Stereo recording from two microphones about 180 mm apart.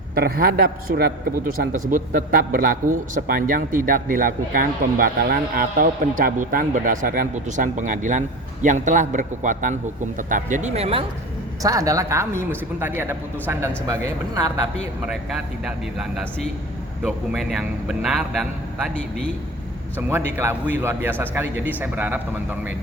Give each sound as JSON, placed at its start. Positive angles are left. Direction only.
{"t": 0.1, "sound": "a man's voice", "side_deg": -60}
{"t": 11.6, "sound": "a man's voice", "side_deg": -20}
{"t": 15.0, "sound": "a man's voice", "side_deg": 0}
{"t": 20.0, "sound": "a man's voice", "side_deg": -10}